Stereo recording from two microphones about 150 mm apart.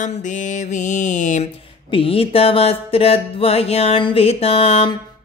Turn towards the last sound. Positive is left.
turn(degrees=40)  # may be behind; listen again after turning